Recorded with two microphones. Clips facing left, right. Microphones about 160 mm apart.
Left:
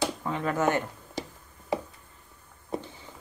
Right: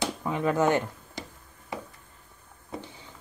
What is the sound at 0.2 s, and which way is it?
Speech, 15° right (ahead or behind).